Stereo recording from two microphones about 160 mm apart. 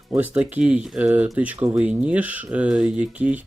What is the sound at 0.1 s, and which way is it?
Speech, 10° right (ahead or behind).